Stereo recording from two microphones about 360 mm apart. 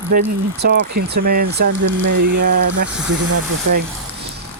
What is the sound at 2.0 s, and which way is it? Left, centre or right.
Speech, right.